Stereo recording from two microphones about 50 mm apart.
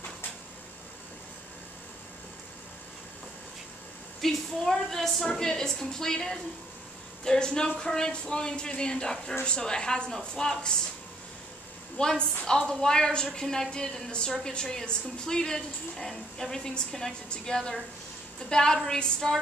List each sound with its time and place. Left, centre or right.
4.2 s a woman's voice: centre
12.0 s a woman's voice: centre